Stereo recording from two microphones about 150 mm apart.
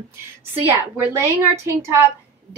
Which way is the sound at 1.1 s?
15° right (ahead or behind).